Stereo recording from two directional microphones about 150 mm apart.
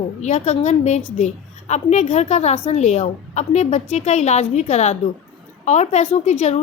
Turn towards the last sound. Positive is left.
turn(degrees=45)  # may be behind; listen again after turning